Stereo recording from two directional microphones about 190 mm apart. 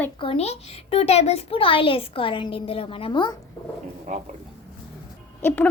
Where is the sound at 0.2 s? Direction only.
30° left (ahead or behind).